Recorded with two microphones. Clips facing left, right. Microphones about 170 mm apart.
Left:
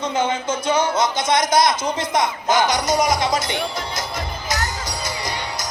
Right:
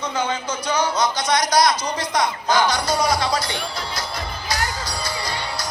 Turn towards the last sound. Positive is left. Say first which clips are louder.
# even
turn(degrees=20)  # may be behind; listen again after turning